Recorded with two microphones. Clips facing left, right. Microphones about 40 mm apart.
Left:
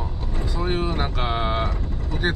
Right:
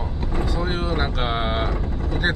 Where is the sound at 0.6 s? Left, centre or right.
Centre.